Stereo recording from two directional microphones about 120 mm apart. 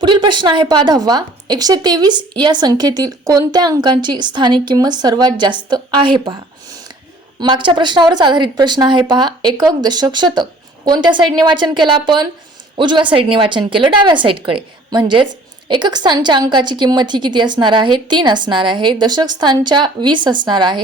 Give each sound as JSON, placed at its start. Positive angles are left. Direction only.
{"t": 0.0, "sound": "a woman's voice", "side_deg": -40}
{"t": 7.3, "sound": "a woman's voice", "side_deg": -40}